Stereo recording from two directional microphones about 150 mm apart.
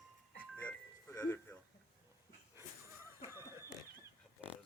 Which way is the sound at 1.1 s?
15° left (ahead or behind).